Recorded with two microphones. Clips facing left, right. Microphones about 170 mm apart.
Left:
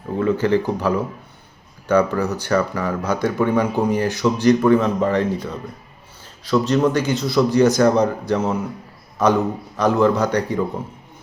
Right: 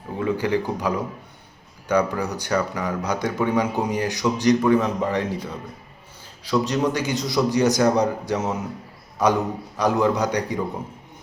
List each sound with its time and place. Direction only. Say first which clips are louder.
0.2 s a man's voice: left 4 dB; 15° right (ahead or behind)